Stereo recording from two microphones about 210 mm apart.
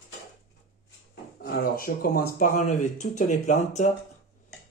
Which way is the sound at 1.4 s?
45° left (ahead or behind).